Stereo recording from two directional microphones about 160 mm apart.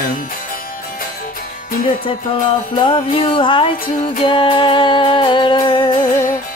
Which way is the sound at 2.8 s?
30° left (ahead or behind).